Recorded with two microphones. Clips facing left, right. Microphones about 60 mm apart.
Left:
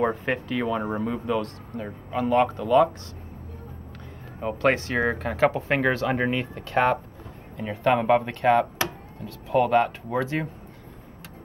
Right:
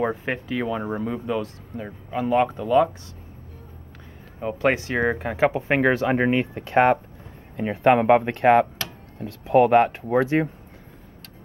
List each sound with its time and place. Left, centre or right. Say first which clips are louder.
0.0 s speech: left 1 dB; centre
4.4 s speech: right 1 dB; centre
5.3 s speech: even; centre